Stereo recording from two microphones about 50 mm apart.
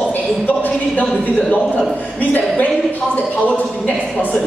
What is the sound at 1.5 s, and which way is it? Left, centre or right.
Speech, left.